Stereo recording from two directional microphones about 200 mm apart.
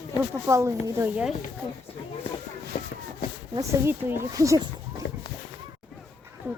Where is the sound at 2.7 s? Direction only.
30° left (ahead or behind).